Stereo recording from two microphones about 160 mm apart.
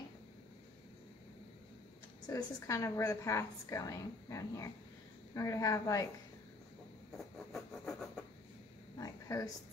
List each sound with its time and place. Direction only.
2.2 s a woman's voice: 20° left (ahead or behind)
7.1 s train: centre (ahead or behind)
8.9 s a sound: 20° left (ahead or behind)